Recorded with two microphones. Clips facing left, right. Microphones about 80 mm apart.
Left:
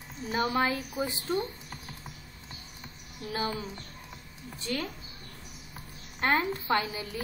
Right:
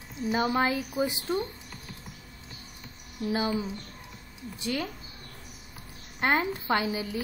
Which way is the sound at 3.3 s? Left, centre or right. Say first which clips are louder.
Right 4 dB; centre.